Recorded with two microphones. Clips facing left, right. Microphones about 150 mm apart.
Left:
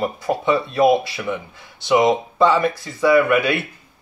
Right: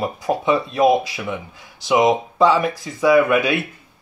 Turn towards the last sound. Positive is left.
turn(degrees=-20)  # may be behind; listen again after turning